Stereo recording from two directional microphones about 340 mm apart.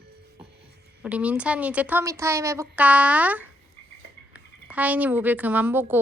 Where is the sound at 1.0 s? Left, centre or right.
Centre.